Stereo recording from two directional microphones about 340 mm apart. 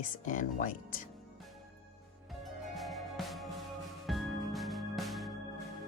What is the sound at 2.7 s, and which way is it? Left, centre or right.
Music, centre.